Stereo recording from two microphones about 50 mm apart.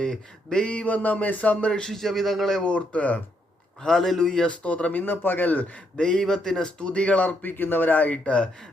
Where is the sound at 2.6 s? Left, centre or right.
Left.